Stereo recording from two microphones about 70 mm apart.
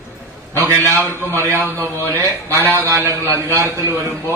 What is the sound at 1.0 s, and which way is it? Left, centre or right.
Speech, left.